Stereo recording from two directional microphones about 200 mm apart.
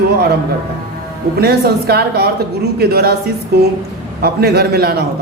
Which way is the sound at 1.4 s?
50° right (ahead or behind).